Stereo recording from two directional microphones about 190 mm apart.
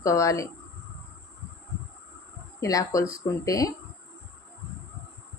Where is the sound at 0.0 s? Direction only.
15° left (ahead or behind).